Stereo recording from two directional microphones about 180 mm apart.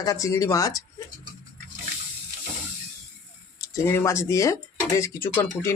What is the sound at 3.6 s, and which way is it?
Speech, 15° left (ahead or behind).